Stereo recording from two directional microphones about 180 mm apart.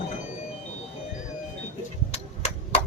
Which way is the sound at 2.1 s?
35° left (ahead or behind).